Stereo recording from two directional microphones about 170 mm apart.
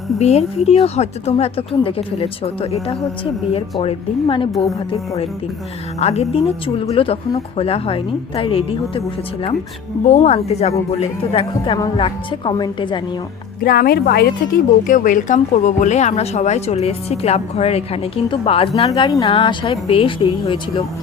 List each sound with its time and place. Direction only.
0.2 s a woman's voice: 40° left (ahead or behind)
13.6 s speech: 60° left (ahead or behind)
14.8 s a woman's voice: 50° left (ahead or behind); by 18.7 s 35° left (ahead or behind)
18.9 s a woman's voice: 25° left (ahead or behind)